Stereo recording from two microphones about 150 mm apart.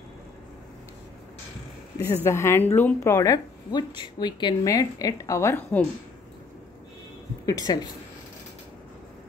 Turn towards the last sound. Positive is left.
turn(degrees=25)  # may be behind; listen again after turning